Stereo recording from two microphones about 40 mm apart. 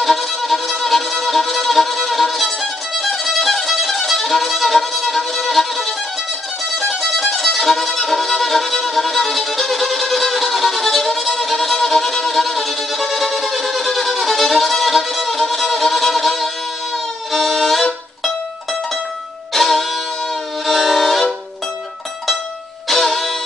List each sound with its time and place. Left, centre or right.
0.0 s music: centre
19.5 s music: centre
20.6 s train: centre
22.8 s music: centre